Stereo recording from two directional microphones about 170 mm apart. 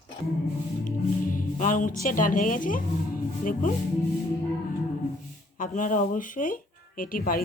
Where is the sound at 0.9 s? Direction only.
50° left (ahead or behind).